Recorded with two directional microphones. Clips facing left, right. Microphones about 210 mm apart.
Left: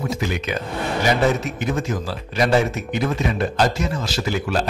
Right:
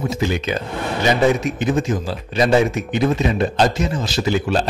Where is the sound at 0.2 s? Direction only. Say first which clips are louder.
Right 4 dB; 30° right (ahead or behind).